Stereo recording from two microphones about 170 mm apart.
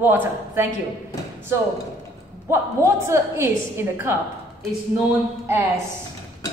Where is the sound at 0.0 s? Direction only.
10° right (ahead or behind).